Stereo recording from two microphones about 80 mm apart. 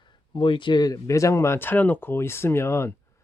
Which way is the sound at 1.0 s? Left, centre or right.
Left.